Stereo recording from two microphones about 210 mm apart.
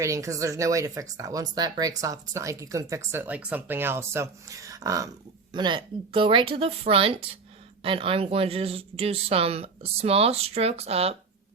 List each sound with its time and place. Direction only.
0.0 s speech: 15° right (ahead or behind)